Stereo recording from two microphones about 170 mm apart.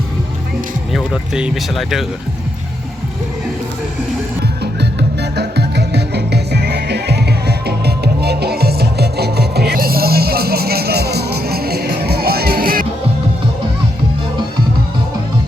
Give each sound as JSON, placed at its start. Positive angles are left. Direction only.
{"t": 0.9, "sound": "speech", "side_deg": -5}
{"t": 4.6, "sound": "music", "side_deg": -80}